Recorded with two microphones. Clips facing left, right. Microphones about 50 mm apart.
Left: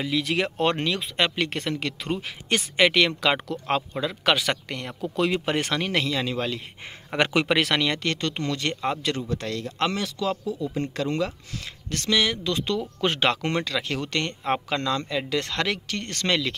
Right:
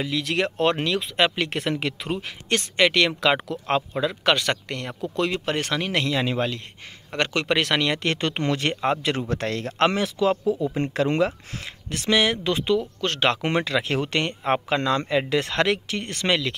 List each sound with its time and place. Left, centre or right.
0.0 s speech: centre
3.1 s speech: centre
7.1 s speech: centre
8.0 s speech: right
9.3 s speech: right
9.8 s speech: right
11.9 s speech: centre
13.0 s speech: centre
13.4 s speech: centre